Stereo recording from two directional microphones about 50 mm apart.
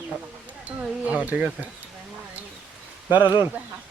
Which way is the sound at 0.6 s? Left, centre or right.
Right.